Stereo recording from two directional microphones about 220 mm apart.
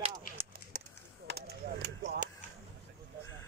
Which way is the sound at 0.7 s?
40° right (ahead or behind).